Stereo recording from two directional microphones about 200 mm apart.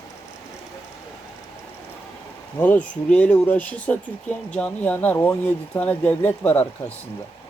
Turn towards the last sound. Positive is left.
turn(degrees=10)  # may be behind; listen again after turning